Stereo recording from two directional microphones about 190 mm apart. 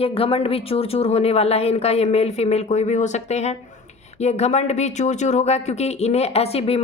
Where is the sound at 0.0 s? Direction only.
30° left (ahead or behind).